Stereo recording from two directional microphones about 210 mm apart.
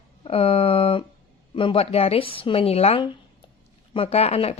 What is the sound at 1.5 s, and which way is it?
Speech, 25° left (ahead or behind).